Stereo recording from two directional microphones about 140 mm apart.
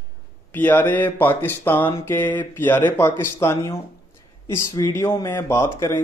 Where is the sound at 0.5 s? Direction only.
10° left (ahead or behind).